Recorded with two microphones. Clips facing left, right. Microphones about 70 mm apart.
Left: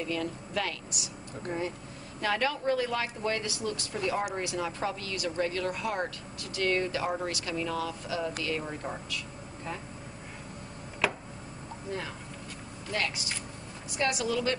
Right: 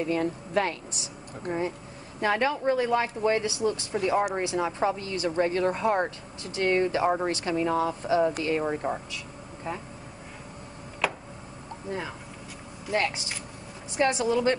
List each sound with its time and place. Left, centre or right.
0.0 s speech: right
11.0 s tick-tock: centre
12.9 s speech: right